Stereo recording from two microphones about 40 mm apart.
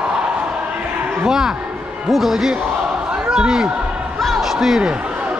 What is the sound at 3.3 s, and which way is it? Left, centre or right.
Speech, centre.